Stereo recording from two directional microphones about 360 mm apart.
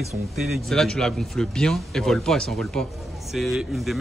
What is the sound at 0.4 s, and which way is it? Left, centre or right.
A man's voice, centre.